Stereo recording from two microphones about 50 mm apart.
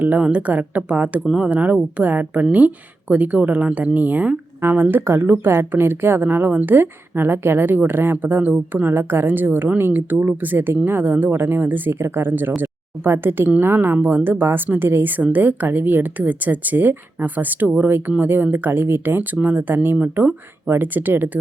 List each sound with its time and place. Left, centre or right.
0.0 s a woman's voice: right
5.5 s a woman's voice: right
11.3 s a woman's voice: right